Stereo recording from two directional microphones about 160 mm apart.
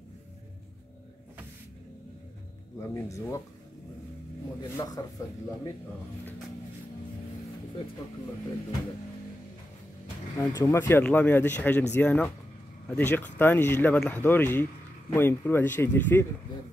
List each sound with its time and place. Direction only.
2.9 s speech: 20° left (ahead or behind)
4.6 s speech: 25° left (ahead or behind)
10.3 s speech: 20° left (ahead or behind)